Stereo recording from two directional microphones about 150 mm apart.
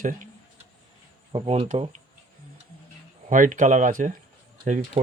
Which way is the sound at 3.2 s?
60° right (ahead or behind).